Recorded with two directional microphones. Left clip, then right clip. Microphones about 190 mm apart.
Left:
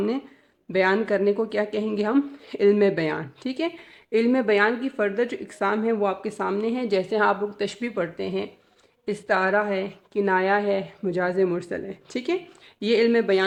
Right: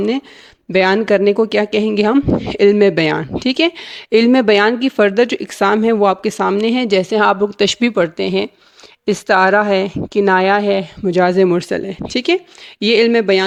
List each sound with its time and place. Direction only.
0.7 s speech: 45° right (ahead or behind)
9.0 s speech: 40° right (ahead or behind)